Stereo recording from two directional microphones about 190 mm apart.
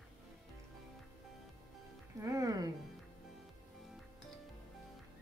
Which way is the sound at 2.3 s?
20° right (ahead or behind).